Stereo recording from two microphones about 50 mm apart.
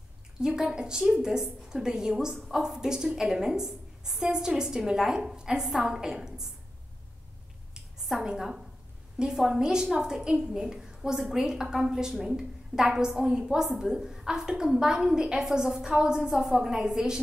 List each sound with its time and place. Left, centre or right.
0.4 s a woman's voice: centre
8.2 s a woman's voice: centre
16.2 s a woman's voice: centre